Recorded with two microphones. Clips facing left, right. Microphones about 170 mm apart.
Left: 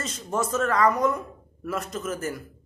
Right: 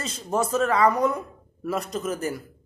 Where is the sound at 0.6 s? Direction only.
10° right (ahead or behind).